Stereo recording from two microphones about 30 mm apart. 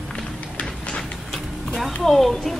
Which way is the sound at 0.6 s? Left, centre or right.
Left.